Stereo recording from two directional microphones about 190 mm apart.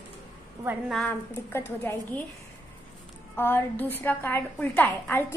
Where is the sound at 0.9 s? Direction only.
5° left (ahead or behind).